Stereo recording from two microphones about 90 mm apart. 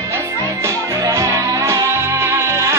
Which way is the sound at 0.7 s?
40° right (ahead or behind).